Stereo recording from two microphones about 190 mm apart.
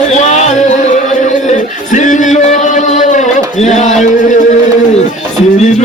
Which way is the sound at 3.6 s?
40° left (ahead or behind).